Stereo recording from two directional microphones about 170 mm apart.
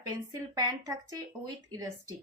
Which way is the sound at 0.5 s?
20° right (ahead or behind).